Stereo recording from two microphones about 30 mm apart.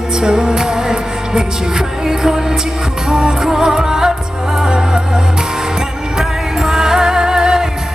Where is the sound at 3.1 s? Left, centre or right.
Right.